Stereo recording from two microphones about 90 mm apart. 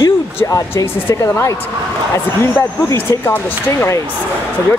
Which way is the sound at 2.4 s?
25° left (ahead or behind).